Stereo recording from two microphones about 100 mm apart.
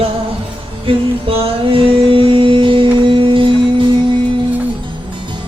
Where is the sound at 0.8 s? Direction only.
65° right (ahead or behind).